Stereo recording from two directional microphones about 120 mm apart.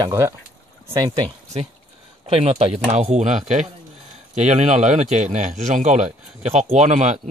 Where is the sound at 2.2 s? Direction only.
60° right (ahead or behind).